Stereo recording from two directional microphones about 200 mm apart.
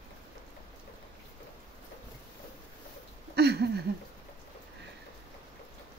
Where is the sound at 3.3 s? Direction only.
55° right (ahead or behind).